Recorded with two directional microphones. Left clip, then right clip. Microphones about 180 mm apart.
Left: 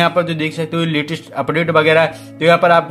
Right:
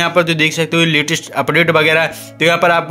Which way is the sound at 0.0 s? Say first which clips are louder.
Right 3 dB; 20° right (ahead or behind).